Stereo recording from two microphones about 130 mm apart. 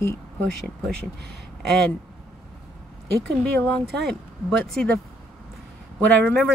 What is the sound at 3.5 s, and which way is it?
Speech, 10° left (ahead or behind).